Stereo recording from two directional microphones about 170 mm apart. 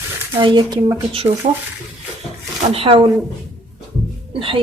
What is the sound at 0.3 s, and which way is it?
Speech, 25° right (ahead or behind).